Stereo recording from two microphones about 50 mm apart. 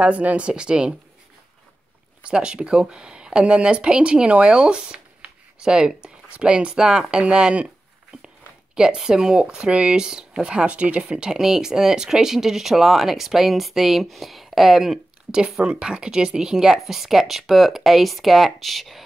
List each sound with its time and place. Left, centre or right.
0.0 s speech: right
2.2 s speech: centre
8.7 s speech: centre